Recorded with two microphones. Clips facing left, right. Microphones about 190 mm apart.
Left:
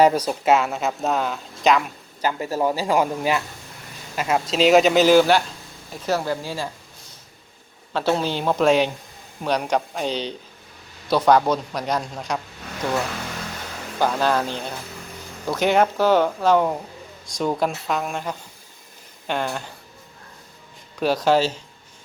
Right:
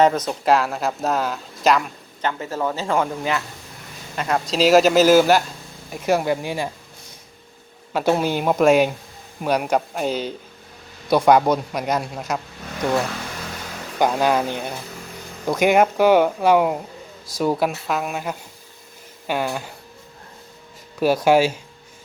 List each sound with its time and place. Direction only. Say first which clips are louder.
0.0 s speech: even; 10° left (ahead or behind)
2.2 s a man's voice: left 2 dB; 15° left (ahead or behind); by 6.7 s 20° right (ahead or behind)
7.9 s a man's voice: right 2 dB; 10° right (ahead or behind)
14.0 s a man's voice: right 2 dB; 15° right (ahead or behind)
21.0 s a man's voice: right 3 dB; 10° right (ahead or behind)